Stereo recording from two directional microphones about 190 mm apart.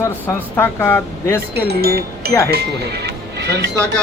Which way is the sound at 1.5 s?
55° right (ahead or behind).